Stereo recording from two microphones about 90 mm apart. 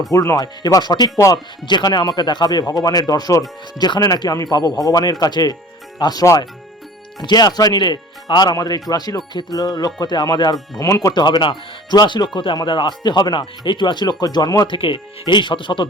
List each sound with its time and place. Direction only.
0.1 s speech: 35° left (ahead or behind)
0.4 s speech: 50° left (ahead or behind)
11.1 s speech: 55° left (ahead or behind)
13.0 s speech: 50° left (ahead or behind)
14.7 s speech: 65° left (ahead or behind)